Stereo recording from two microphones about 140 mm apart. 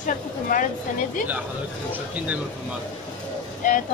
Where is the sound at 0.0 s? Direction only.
70° left (ahead or behind).